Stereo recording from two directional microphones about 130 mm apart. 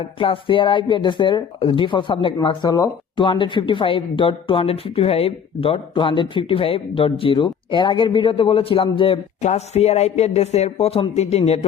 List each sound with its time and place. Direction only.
0.2 s speech: 40° left (ahead or behind)
3.2 s speech: 40° left (ahead or behind)
9.4 s a man's voice: 55° left (ahead or behind)